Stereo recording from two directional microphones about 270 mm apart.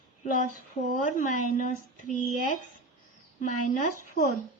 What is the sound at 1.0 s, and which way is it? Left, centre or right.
Speech, left.